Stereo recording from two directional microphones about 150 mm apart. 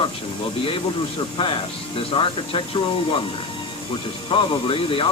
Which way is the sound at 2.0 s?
35° left (ahead or behind).